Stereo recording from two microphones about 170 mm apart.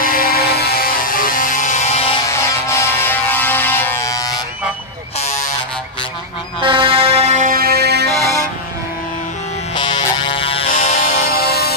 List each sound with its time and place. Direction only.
0.0 s music: 60° left (ahead or behind); by 2.1 s 35° left (ahead or behind)
2.2 s music: 15° left (ahead or behind)
5.2 s a sound: 45° left (ahead or behind)
6.6 s music: 30° right (ahead or behind); by 8.1 s 70° right (ahead or behind)
9.8 s music: 25° left (ahead or behind)
11.2 s music: 65° left (ahead or behind)